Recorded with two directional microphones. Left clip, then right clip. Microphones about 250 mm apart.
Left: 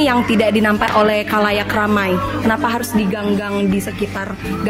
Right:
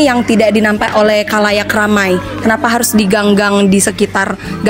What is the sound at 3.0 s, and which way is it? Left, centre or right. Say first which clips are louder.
Speech: right 9 dB; right.